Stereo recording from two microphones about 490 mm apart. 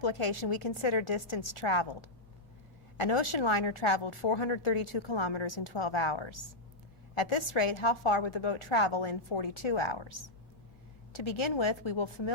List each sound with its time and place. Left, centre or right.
0.0 s a woman's voice: left